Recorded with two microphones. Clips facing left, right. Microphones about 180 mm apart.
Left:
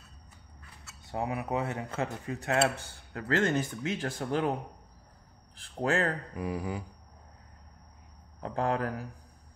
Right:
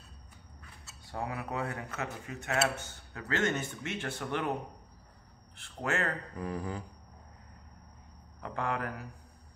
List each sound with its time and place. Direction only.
1.0 s speech: 20° left (ahead or behind)
5.6 s speech: 35° left (ahead or behind)
6.3 s a sound: 10° left (ahead or behind)
8.4 s speech: 35° left (ahead or behind)